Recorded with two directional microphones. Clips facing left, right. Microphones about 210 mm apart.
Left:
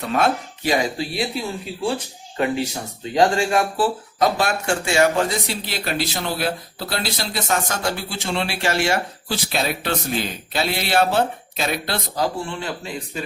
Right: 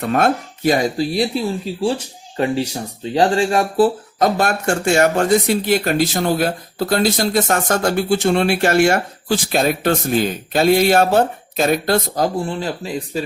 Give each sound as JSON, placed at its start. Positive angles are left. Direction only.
{"t": 0.0, "sound": "speech", "side_deg": -50}
{"t": 3.2, "sound": "speech", "side_deg": -35}
{"t": 4.2, "sound": "speech", "side_deg": -50}